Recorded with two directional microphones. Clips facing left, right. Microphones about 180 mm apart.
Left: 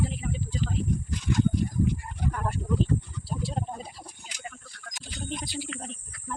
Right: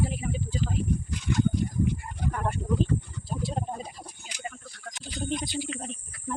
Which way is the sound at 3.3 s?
20° right (ahead or behind).